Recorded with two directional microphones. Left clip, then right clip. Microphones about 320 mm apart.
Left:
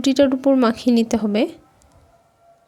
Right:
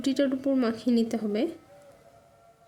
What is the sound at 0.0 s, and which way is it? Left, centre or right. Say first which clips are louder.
Speech: left 10 dB; left.